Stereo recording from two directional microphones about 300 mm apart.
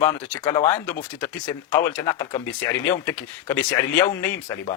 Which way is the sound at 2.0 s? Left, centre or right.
Centre.